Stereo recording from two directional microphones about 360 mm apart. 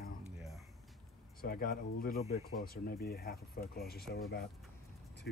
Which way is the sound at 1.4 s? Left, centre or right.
Left.